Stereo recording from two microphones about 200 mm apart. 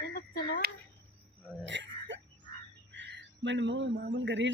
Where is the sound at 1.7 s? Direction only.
65° right (ahead or behind).